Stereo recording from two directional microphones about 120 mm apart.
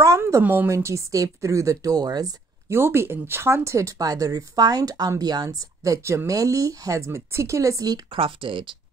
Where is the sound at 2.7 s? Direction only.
20° right (ahead or behind).